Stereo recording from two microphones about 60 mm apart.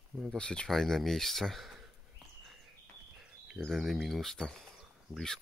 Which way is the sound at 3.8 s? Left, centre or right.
Centre.